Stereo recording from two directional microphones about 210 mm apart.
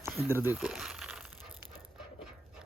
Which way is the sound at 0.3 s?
10° right (ahead or behind).